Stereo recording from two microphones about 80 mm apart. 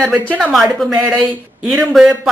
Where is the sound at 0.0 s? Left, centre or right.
Centre.